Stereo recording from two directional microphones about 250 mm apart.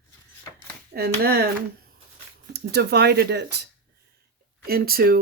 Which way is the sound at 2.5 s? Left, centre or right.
Right.